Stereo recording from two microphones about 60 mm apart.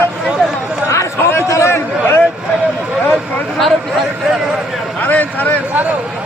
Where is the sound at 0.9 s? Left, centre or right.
Left.